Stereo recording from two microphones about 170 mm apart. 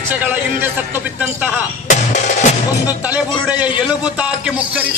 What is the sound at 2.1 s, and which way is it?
Music, 45° left (ahead or behind).